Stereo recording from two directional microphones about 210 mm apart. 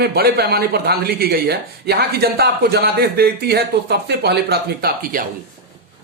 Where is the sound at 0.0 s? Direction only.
50° right (ahead or behind).